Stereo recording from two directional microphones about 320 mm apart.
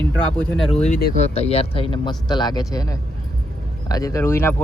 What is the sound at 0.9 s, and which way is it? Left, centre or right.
Speech, left.